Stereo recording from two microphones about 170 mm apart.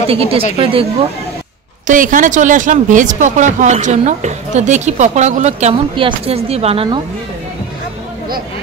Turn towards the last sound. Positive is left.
turn(degrees=-35)  # may be behind; listen again after turning